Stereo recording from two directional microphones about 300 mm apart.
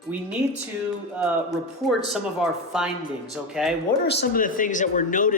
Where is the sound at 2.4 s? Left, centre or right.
Centre.